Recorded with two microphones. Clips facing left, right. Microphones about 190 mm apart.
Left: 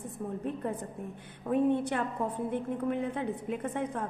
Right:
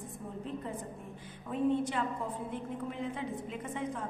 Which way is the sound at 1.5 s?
60° left (ahead or behind).